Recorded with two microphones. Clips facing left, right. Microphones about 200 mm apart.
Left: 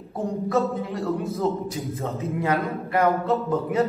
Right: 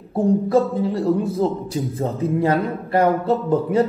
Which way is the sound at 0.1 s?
30° right (ahead or behind).